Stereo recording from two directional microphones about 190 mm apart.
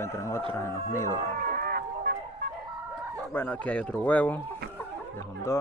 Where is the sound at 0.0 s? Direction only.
15° left (ahead or behind).